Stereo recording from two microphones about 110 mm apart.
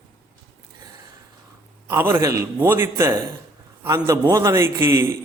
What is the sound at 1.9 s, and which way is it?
A man's voice, 25° right (ahead or behind).